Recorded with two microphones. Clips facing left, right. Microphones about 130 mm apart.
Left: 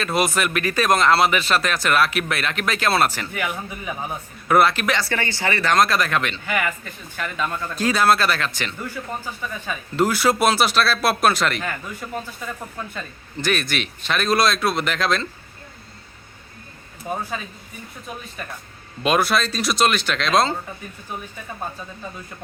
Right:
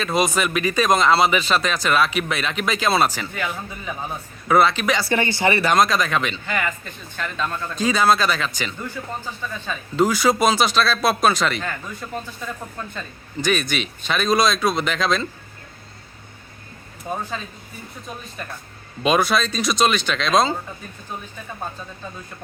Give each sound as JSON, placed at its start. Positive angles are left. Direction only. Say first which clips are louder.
{"t": 0.0, "sound": "speech", "louder": "right 1 dB", "side_deg": 5}
{"t": 3.3, "sound": "a man's voice", "louder": "left 1 dB", "side_deg": 15}
{"t": 4.9, "sound": "speech", "louder": "right 4 dB", "side_deg": -15}
{"t": 5.7, "sound": "a man's voice", "louder": "even", "side_deg": 0}
{"t": 17.3, "sound": "a man's voice", "louder": "even", "side_deg": 10}
{"t": 19.0, "sound": "speech", "louder": "right 1 dB", "side_deg": 0}